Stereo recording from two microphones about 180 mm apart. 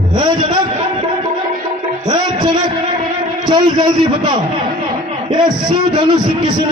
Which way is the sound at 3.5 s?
25° right (ahead or behind).